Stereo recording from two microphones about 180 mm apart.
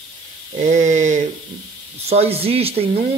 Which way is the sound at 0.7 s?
45° right (ahead or behind).